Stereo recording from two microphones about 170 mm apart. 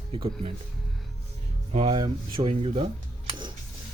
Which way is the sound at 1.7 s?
30° right (ahead or behind).